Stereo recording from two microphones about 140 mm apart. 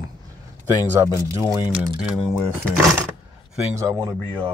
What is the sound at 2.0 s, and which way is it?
Speech, 5° right (ahead or behind).